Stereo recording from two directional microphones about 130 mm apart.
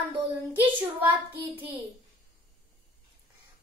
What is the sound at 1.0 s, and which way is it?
Child singing, 40° right (ahead or behind).